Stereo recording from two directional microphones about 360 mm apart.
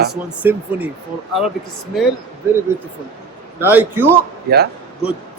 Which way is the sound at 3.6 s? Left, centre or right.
Centre.